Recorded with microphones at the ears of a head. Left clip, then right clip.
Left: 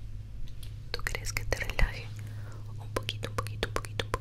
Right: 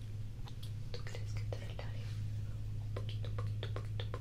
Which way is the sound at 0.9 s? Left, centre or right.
Left.